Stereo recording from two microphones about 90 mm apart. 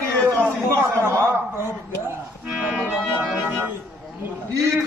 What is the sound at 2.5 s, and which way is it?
Accordion, 5° right (ahead or behind).